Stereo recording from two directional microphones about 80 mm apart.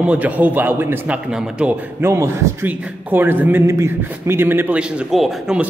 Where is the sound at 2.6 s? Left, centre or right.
Right.